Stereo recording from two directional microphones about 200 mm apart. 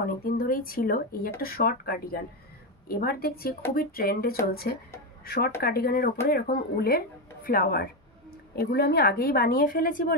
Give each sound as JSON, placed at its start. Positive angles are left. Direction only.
{"t": 0.2, "sound": "a woman's voice", "side_deg": 45}